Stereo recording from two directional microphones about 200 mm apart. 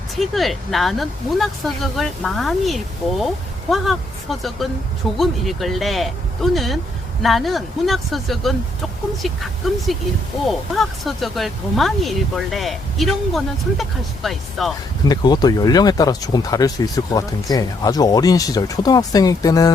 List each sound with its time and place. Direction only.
0.2 s speech: centre (ahead or behind)
15.0 s speech: 20° left (ahead or behind)